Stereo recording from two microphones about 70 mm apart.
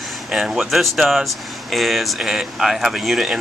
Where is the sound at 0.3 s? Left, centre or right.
Centre.